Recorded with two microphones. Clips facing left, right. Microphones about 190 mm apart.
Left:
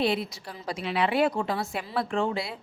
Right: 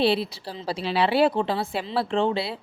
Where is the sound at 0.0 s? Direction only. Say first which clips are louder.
Right 4 dB; 30° right (ahead or behind).